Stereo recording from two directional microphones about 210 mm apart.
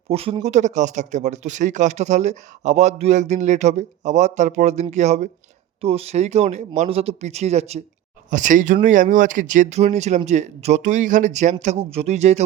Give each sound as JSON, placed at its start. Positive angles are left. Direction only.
{"t": 0.1, "sound": "speech", "side_deg": -25}